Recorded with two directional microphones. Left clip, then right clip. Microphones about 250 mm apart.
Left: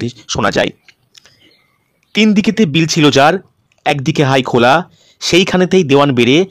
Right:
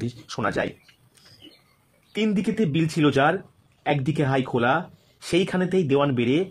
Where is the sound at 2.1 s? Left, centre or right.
Left.